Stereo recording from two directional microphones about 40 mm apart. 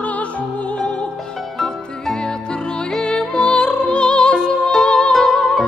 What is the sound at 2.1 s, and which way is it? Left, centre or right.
Music, left.